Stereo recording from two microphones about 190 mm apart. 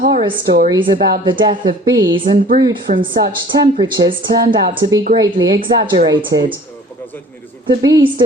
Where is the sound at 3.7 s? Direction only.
25° right (ahead or behind).